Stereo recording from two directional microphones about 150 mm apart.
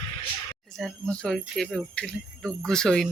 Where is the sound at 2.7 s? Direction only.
5° left (ahead or behind).